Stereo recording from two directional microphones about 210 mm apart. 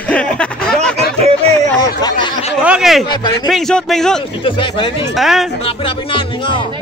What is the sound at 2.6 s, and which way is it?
A man's voice, 5° right (ahead or behind).